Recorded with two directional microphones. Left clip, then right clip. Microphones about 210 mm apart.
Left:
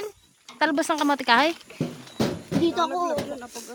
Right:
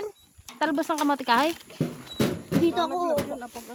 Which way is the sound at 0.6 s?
5° left (ahead or behind).